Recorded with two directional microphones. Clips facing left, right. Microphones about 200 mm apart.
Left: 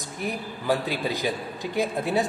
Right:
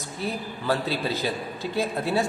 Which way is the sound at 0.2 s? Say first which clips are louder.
Even; 15° left (ahead or behind).